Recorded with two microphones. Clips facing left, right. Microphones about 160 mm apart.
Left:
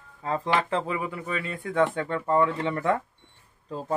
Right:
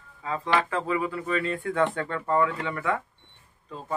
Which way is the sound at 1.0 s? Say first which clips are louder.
Right 3 dB; 15° left (ahead or behind).